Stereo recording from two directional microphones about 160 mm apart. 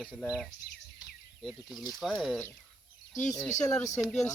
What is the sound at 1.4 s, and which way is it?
Speech, centre (ahead or behind).